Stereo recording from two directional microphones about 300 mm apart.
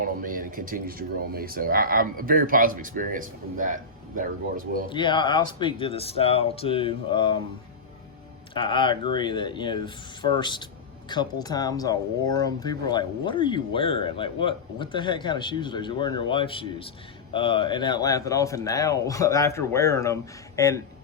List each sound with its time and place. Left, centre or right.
0.0 s speech: right
4.9 s speech: centre
8.5 s speech: centre